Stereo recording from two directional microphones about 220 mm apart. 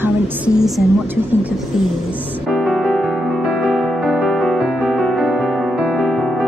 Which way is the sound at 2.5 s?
Centre (ahead or behind).